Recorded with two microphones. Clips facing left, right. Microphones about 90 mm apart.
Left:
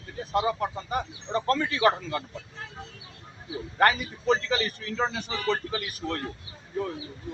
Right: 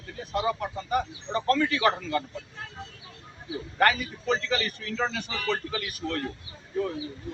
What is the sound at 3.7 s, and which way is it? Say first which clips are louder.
Speech: left 1 dB; 30° left (ahead or behind).